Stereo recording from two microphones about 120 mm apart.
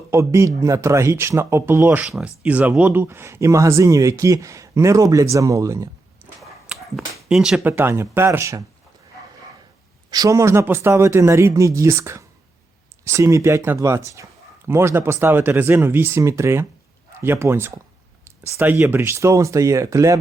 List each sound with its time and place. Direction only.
0.1 s speech: 25° right (ahead or behind)
6.4 s a sound: 5° right (ahead or behind)
7.6 s speech: 20° right (ahead or behind)
10.1 s speech: 30° right (ahead or behind)